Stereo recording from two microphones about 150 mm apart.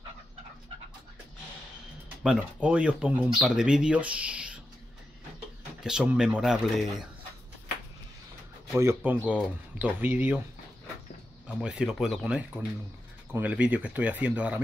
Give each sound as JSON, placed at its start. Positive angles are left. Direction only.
{"t": 2.2, "sound": "speech", "side_deg": -10}
{"t": 5.9, "sound": "speech", "side_deg": -5}
{"t": 8.7, "sound": "speech", "side_deg": -15}
{"t": 11.4, "sound": "speech", "side_deg": -5}